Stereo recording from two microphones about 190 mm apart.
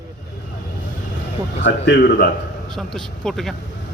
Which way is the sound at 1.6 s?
60° left (ahead or behind).